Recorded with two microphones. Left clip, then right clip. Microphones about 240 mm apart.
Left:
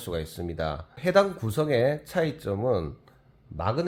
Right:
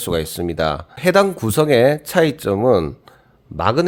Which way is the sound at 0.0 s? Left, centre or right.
Right.